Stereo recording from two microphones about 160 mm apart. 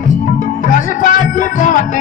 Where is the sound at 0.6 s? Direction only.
55° left (ahead or behind).